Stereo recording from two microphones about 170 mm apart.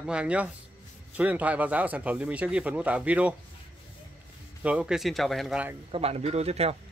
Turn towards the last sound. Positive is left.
turn(degrees=-35)  # may be behind; listen again after turning